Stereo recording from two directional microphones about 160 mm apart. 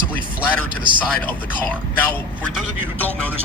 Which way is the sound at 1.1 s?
10° left (ahead or behind).